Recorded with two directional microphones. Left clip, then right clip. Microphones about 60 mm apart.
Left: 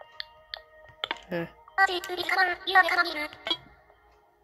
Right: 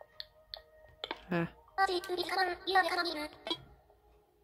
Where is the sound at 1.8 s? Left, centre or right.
Right.